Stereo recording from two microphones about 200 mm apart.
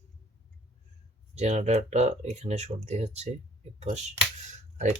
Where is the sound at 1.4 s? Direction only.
35° right (ahead or behind).